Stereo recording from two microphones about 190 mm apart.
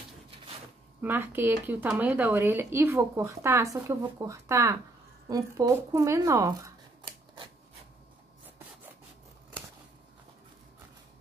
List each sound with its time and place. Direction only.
1.0 s speech: 10° right (ahead or behind)